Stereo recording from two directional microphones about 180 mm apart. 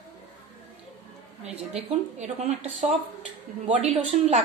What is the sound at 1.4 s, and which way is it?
A woman's voice, 35° right (ahead or behind).